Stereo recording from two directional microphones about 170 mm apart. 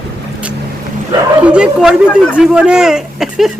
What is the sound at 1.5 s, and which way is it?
Speech, 5° right (ahead or behind).